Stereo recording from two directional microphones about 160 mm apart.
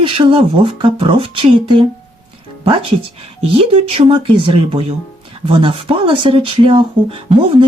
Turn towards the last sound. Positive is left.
turn(degrees=-35)  # may be behind; listen again after turning